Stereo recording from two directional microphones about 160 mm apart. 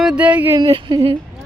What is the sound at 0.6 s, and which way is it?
Speech, 25° right (ahead or behind).